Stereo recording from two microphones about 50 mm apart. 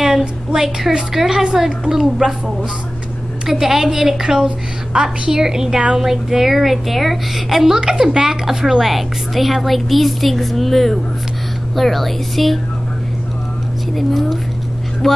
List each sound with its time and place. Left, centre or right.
0.0 s a sound: centre
0.8 s a woman's voice: centre
13.9 s a woman's voice: centre